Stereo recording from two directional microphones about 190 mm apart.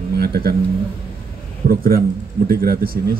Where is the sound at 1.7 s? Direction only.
50° right (ahead or behind).